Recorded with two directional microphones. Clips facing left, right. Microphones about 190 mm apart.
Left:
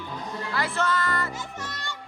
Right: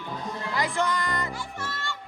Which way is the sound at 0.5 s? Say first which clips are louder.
Even; 15° right (ahead or behind).